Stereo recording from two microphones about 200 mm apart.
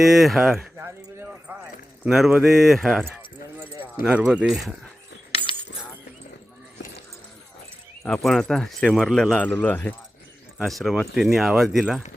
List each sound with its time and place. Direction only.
0.0 s speech: centre (ahead or behind)
8.0 s speech: centre (ahead or behind)